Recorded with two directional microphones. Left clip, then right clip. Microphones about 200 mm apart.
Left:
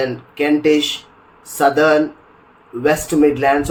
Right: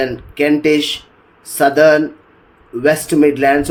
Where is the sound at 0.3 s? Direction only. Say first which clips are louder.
Right 2 dB; 40° right (ahead or behind).